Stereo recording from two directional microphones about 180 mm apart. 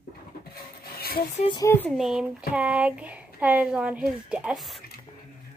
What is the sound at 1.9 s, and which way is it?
A woman's voice, 5° right (ahead or behind).